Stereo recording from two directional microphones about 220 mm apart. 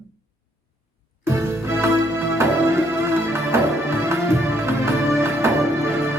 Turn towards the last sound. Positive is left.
turn(degrees=-10)  # may be behind; listen again after turning